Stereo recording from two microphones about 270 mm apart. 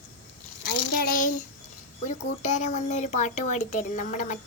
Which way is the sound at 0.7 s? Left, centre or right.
Left.